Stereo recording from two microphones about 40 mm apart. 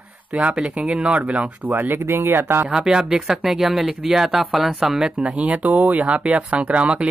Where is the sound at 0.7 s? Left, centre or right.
Right.